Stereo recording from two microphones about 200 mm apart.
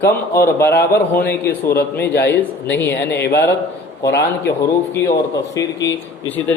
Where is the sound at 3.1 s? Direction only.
55° left (ahead or behind).